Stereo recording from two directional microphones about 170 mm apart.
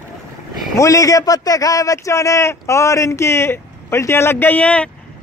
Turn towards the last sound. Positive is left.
turn(degrees=5)  # may be behind; listen again after turning